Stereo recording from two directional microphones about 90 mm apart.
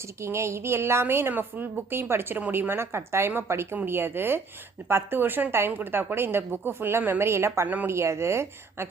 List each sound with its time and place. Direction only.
0.2 s a woman's voice: 30° right (ahead or behind)
7.7 s a woman's voice: 20° right (ahead or behind)
7.9 s speech: 30° right (ahead or behind)